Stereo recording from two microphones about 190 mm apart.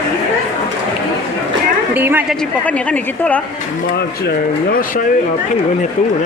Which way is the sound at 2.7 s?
5° left (ahead or behind).